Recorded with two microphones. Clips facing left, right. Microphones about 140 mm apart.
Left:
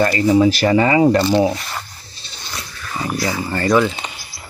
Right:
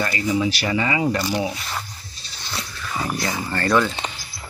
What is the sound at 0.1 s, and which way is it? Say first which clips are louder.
Speech: left 8 dB; 40° left (ahead or behind).